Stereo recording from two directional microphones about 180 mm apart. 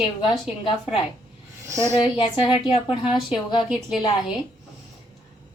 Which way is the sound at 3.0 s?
5° right (ahead or behind).